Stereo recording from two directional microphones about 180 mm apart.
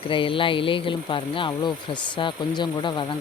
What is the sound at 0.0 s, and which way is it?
Speech, 30° left (ahead or behind).